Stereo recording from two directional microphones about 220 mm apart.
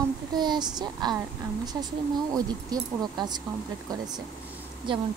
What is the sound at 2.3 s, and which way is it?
Speech, 15° right (ahead or behind).